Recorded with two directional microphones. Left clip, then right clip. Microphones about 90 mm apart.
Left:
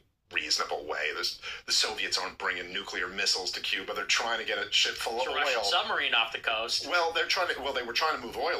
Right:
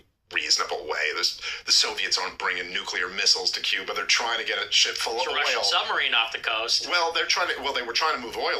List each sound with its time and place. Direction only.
0.9 s speech: 20° right (ahead or behind)